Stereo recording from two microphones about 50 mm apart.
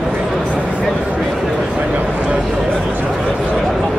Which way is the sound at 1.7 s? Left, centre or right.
Right.